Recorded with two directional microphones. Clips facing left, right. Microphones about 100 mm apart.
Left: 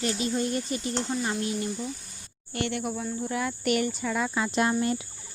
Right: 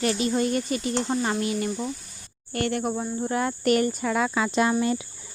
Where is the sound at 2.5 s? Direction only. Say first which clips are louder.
Right 4 dB; 45° right (ahead or behind); by 4.8 s 70° right (ahead or behind).